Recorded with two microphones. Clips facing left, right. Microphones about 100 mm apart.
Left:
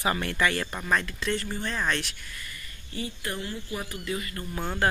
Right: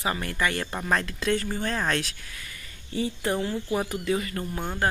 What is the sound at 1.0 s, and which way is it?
Speech, 45° right (ahead or behind).